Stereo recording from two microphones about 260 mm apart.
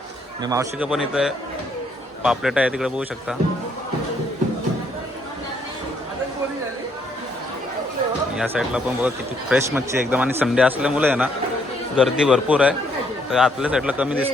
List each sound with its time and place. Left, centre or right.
0.4 s speech: centre
8.4 s speech: centre